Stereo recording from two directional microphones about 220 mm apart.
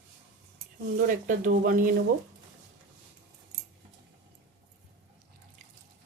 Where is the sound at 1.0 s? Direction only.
35° right (ahead or behind).